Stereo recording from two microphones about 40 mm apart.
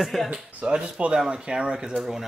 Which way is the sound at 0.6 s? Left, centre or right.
Right.